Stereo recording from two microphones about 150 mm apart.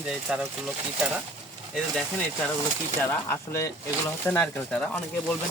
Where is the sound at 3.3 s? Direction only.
15° left (ahead or behind).